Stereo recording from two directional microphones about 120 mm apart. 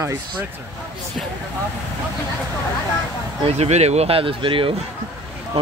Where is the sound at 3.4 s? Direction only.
60° right (ahead or behind).